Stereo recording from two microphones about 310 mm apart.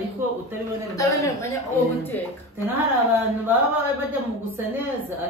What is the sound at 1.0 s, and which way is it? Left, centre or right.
A woman's voice, centre.